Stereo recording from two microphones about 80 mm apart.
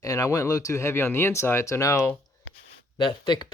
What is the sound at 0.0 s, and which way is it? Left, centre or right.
Speech, left.